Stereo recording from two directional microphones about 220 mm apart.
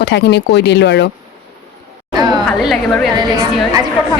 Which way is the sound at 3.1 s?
15° right (ahead or behind).